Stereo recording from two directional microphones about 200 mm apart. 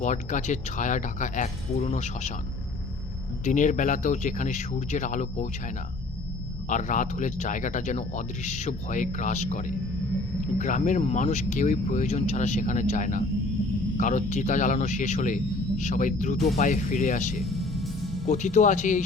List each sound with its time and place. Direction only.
0.0 s speech: 40° left (ahead or behind)
3.4 s speech: 40° left (ahead or behind)
6.7 s speech: 40° left (ahead or behind)
17.4 s music: centre (ahead or behind)
18.3 s speech: 40° left (ahead or behind)